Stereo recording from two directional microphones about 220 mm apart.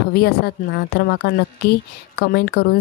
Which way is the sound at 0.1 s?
45° left (ahead or behind).